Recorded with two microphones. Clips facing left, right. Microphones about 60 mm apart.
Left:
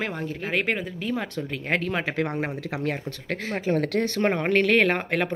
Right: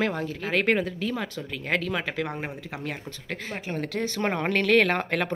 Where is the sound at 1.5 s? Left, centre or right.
Left.